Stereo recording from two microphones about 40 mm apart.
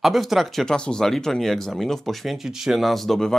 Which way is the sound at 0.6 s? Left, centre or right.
Centre.